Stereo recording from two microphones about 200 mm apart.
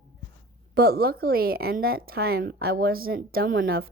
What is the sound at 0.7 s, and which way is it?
A woman's voice, 50° right (ahead or behind).